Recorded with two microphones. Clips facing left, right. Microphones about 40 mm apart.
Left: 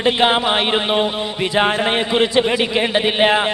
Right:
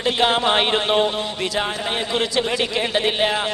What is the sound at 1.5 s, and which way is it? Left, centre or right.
A man's voice, left.